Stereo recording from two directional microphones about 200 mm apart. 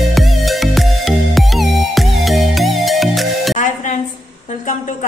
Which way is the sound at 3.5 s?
40° left (ahead or behind).